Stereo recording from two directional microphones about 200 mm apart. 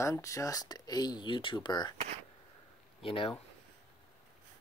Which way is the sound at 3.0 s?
30° left (ahead or behind).